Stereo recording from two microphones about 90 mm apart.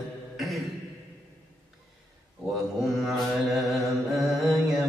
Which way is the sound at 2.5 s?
Centre (ahead or behind).